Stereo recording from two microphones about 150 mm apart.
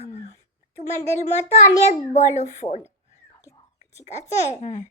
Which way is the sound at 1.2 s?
50° left (ahead or behind).